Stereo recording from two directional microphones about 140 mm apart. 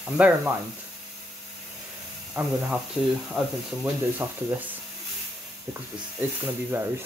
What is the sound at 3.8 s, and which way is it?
Speech, 15° right (ahead or behind).